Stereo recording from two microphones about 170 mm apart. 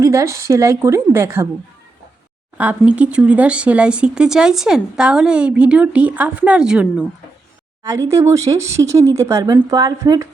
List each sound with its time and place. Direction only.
0.0 s speech: 20° right (ahead or behind)
2.6 s speech: 10° right (ahead or behind)
7.9 s speech: 20° right (ahead or behind)